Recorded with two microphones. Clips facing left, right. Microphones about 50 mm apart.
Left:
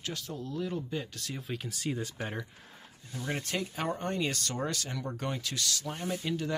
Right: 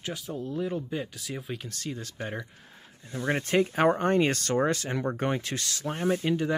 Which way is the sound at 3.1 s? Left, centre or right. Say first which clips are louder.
Right 7 dB; right.